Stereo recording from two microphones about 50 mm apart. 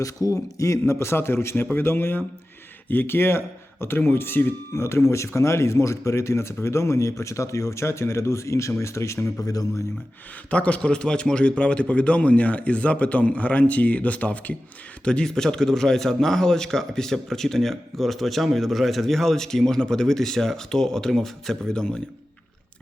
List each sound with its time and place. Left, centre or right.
0.3 s a man's voice: left
4.7 s speech: left
10.5 s a man's voice: left
15.0 s a man's voice: centre